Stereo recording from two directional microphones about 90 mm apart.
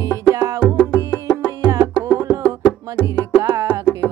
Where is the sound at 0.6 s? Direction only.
15° left (ahead or behind).